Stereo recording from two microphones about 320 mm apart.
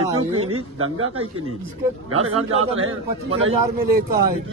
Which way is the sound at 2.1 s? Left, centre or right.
Right.